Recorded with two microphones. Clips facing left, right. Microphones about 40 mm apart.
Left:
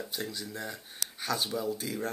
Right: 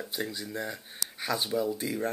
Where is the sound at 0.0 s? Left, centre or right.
Centre.